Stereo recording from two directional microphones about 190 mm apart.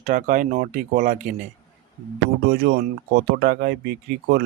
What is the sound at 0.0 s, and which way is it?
Speech, 45° right (ahead or behind).